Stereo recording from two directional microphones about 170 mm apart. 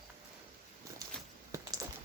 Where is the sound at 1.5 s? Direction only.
15° right (ahead or behind).